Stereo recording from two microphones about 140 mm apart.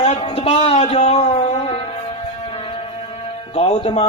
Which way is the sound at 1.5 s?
45° left (ahead or behind).